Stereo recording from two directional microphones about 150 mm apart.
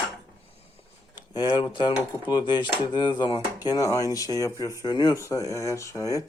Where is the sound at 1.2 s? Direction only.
30° left (ahead or behind).